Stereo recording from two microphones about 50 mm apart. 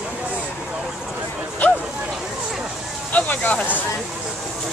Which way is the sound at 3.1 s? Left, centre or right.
Left.